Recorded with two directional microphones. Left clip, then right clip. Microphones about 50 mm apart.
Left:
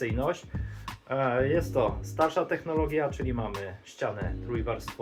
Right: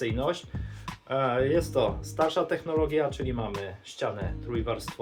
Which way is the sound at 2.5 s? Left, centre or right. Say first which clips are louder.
Right 1 dB; right.